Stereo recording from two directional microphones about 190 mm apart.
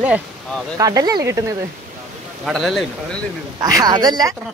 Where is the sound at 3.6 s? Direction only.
20° right (ahead or behind).